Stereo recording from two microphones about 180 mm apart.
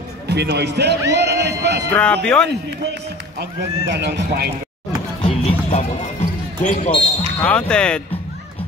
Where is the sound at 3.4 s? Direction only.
70° right (ahead or behind).